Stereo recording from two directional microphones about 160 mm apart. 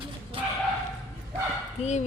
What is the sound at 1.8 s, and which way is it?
Speech, 45° left (ahead or behind).